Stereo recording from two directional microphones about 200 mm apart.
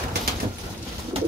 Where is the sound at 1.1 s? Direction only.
25° right (ahead or behind).